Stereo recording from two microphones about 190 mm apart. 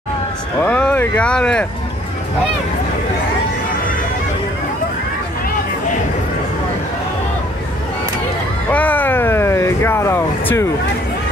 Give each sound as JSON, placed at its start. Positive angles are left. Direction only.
{"t": 0.6, "sound": "speech", "side_deg": 5}
{"t": 8.6, "sound": "vehicle", "side_deg": 10}